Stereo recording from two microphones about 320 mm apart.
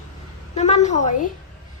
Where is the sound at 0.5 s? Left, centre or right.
Left.